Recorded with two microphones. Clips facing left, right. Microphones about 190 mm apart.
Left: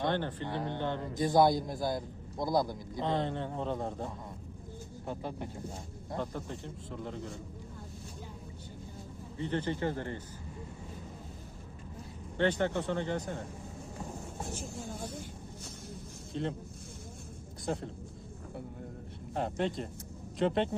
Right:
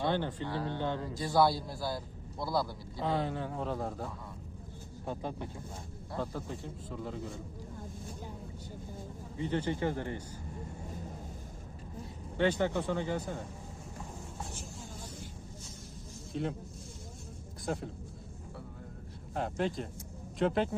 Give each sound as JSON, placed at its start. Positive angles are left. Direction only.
{"t": 0.0, "sound": "speech", "side_deg": -10}
{"t": 0.4, "sound": "a man's voice", "side_deg": 20}
{"t": 3.0, "sound": "speech", "side_deg": -5}
{"t": 6.3, "sound": "speech", "side_deg": -5}
{"t": 9.4, "sound": "speech", "side_deg": -15}
{"t": 12.4, "sound": "speech", "side_deg": -10}
{"t": 16.3, "sound": "speech", "side_deg": -5}
{"t": 17.7, "sound": "speech", "side_deg": -5}
{"t": 19.3, "sound": "speech", "side_deg": 0}